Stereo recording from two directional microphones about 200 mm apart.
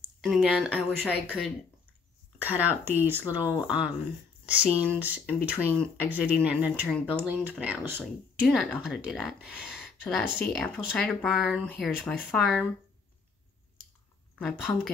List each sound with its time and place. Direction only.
0.2 s speech: centre (ahead or behind)
1.2 s speech: 5° left (ahead or behind)
2.3 s speech: 10° right (ahead or behind)
5.0 s speech: 10° right (ahead or behind)
14.7 s speech: 15° left (ahead or behind)